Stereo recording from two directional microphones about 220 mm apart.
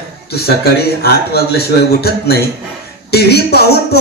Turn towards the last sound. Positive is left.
turn(degrees=45)  # may be behind; listen again after turning